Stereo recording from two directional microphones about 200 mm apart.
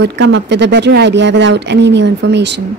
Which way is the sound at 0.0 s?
60° right (ahead or behind).